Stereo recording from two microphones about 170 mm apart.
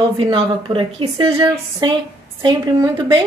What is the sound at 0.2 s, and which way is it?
A woman's voice, 30° right (ahead or behind).